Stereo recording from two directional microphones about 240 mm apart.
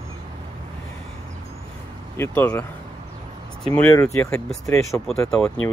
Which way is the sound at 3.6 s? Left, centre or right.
Centre.